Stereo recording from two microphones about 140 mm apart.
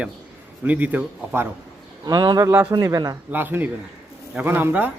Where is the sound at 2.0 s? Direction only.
30° right (ahead or behind).